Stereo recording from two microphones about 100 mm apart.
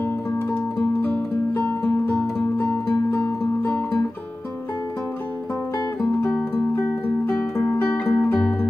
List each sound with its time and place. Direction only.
1.0 s music: 15° left (ahead or behind)
6.3 s music: 15° left (ahead or behind)